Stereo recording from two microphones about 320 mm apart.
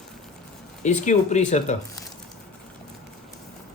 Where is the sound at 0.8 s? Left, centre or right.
Left.